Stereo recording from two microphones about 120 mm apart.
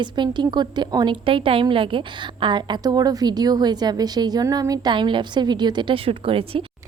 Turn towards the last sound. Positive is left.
turn(degrees=-50)  # may be behind; listen again after turning